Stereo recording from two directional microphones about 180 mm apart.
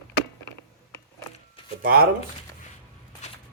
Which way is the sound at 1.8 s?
55° right (ahead or behind).